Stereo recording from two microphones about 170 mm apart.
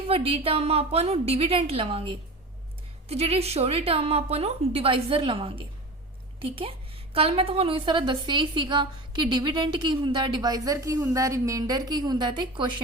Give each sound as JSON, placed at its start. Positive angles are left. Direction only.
{"t": 0.1, "sound": "a woman's voice", "side_deg": -35}
{"t": 3.1, "sound": "a woman's voice", "side_deg": -35}